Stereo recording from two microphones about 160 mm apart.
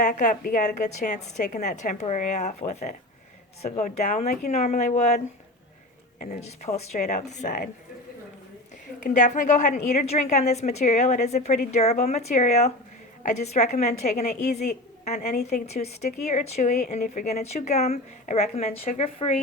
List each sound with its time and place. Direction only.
0.0 s speech: 50° left (ahead or behind)
9.0 s speech: 50° left (ahead or behind)